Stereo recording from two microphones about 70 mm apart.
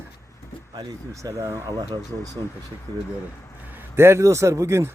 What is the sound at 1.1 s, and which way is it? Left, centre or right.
Speech, right.